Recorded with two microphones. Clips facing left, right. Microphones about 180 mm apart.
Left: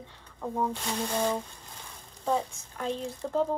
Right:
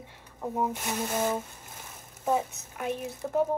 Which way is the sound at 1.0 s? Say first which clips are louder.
Even; 5° right (ahead or behind).